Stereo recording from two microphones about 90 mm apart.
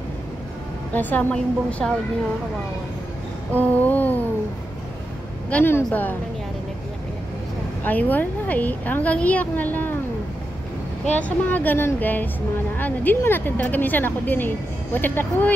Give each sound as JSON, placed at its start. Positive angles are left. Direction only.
{"t": 0.9, "sound": "a woman's voice", "side_deg": 15}
{"t": 3.5, "sound": "a woman's voice", "side_deg": 20}
{"t": 5.5, "sound": "a woman's voice", "side_deg": 20}
{"t": 7.8, "sound": "a woman's voice", "side_deg": 20}
{"t": 11.1, "sound": "a woman's voice", "side_deg": 15}